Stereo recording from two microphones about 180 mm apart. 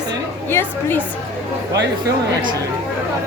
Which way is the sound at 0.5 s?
10° left (ahead or behind).